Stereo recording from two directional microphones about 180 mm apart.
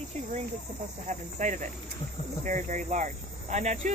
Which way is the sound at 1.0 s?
45° right (ahead or behind).